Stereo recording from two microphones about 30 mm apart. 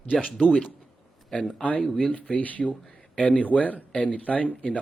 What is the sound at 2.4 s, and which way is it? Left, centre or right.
Speech, left.